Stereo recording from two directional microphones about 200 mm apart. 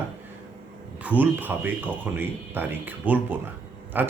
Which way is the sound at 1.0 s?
5° right (ahead or behind).